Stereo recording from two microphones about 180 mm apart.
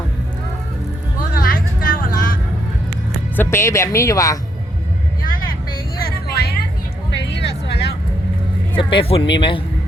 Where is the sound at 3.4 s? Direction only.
15° left (ahead or behind).